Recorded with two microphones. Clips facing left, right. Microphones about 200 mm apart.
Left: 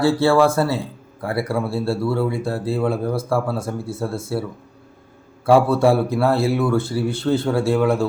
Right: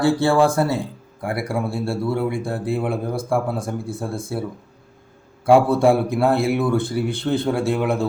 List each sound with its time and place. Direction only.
0.0 s speech: 15° right (ahead or behind)
5.5 s speech: 20° right (ahead or behind)